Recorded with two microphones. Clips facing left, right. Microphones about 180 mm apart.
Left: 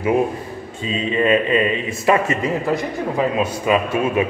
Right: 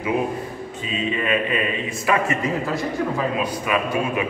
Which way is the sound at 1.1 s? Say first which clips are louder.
Left 8 dB; 25° left (ahead or behind).